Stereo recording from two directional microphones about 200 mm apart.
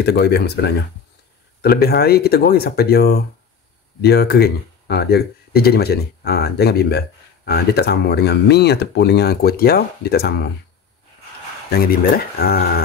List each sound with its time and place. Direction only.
0.0 s speech: 55° left (ahead or behind)
11.7 s speech: 50° left (ahead or behind)